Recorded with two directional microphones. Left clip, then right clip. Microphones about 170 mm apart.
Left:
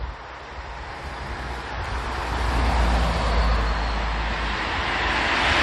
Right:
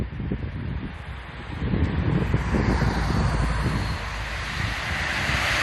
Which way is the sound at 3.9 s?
50° right (ahead or behind).